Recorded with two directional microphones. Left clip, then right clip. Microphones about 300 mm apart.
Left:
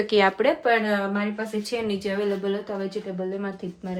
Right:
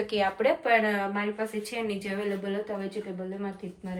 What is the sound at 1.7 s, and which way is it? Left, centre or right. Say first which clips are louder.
Speech: left 5 dB; centre.